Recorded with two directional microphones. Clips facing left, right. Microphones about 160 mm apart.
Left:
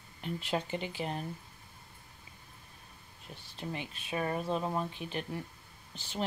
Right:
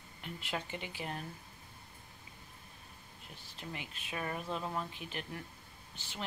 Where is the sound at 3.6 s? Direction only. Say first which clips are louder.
Left 6 dB; 25° left (ahead or behind).